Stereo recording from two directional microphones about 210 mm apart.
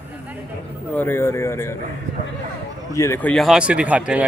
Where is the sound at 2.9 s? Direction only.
10° left (ahead or behind); by 4.2 s 5° right (ahead or behind).